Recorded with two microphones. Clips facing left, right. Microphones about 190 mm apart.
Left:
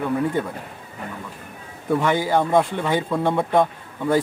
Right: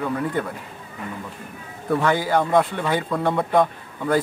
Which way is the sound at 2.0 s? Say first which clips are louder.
Even; 20° left (ahead or behind).